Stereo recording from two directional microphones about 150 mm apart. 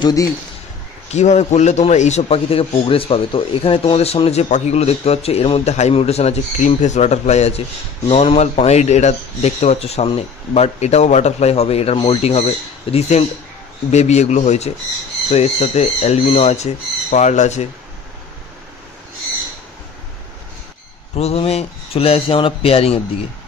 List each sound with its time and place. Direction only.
0.0 s speech: 25° left (ahead or behind)
1.1 s a man's voice: 50° left (ahead or behind)
21.2 s speech: 40° left (ahead or behind)